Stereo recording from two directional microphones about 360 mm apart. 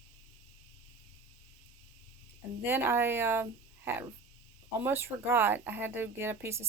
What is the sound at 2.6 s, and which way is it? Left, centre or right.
Speech, centre.